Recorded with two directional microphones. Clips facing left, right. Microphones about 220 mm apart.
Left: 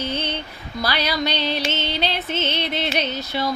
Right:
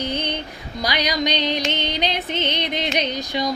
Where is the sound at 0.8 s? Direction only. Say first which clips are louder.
Right 1 dB; 15° right (ahead or behind).